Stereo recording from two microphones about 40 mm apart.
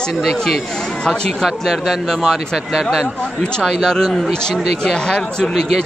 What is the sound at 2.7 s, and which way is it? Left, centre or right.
Speech, centre.